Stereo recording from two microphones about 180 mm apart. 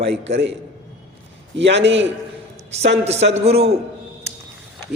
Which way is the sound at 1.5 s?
75° right (ahead or behind).